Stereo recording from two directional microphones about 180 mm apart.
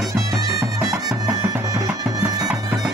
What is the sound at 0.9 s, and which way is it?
Music, 15° right (ahead or behind).